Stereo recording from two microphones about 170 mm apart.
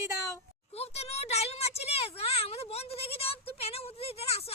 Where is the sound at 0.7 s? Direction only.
35° left (ahead or behind).